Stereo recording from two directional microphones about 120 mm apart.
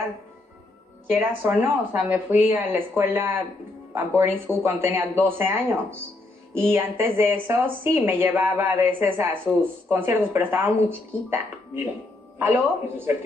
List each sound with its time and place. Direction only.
1.1 s speech: 15° right (ahead or behind)